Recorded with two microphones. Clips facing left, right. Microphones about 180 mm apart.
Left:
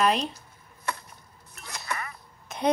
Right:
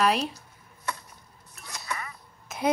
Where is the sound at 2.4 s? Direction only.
5° right (ahead or behind).